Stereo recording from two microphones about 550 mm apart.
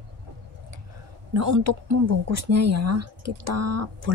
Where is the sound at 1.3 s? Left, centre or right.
Right.